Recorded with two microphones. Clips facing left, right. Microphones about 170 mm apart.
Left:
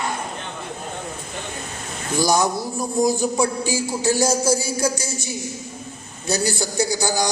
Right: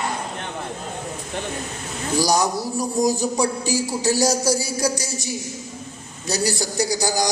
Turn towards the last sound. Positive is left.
turn(degrees=-35)  # may be behind; listen again after turning